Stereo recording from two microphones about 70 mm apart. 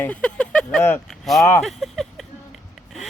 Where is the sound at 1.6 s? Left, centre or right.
Centre.